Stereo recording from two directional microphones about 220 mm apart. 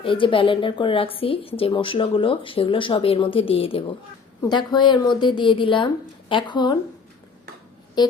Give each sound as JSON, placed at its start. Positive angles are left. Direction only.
{"t": 0.0, "sound": "speech", "side_deg": 25}